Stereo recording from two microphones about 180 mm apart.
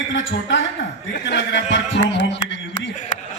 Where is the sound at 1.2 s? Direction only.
80° left.